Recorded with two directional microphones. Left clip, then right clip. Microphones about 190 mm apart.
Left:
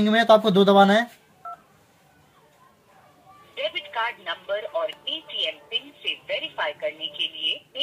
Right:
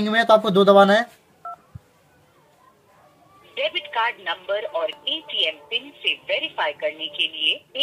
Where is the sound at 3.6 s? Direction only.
35° right (ahead or behind).